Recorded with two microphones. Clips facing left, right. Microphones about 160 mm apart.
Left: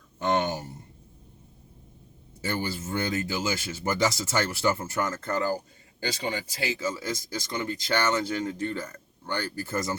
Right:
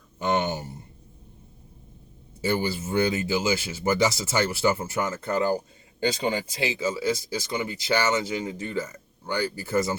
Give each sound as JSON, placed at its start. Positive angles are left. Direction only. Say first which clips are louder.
{"t": 0.2, "sound": "a sound", "louder": "right 1 dB", "side_deg": -5}
{"t": 2.4, "sound": "speech", "louder": "right 5 dB", "side_deg": -15}
{"t": 6.2, "sound": "speech", "louder": "right 4 dB", "side_deg": -25}
{"t": 6.8, "sound": "speech", "louder": "right 5 dB", "side_deg": -10}